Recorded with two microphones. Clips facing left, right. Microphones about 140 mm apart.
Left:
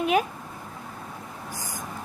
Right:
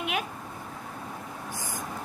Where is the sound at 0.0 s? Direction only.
40° left (ahead or behind).